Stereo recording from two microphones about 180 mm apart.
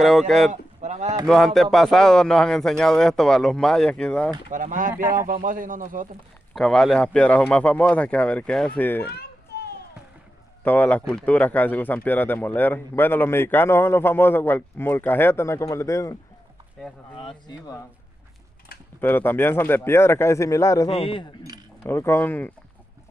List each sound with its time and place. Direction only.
0.0 s speech: centre (ahead or behind)
0.5 s a sound: 40° right (ahead or behind)
1.2 s speech: centre (ahead or behind)
4.5 s speech: 45° right (ahead or behind)
6.5 s speech: centre (ahead or behind)
9.1 s children playing: 65° left (ahead or behind)
10.6 s speech: 10° left (ahead or behind)
17.1 s speech: 25° left (ahead or behind)
18.9 s speech: 10° left (ahead or behind)
20.9 s speech: 30° left (ahead or behind)
21.8 s speech: 10° left (ahead or behind)